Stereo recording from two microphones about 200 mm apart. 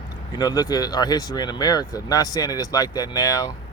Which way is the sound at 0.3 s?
20° left (ahead or behind).